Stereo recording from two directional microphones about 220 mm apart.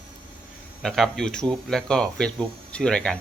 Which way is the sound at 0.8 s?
Centre (ahead or behind).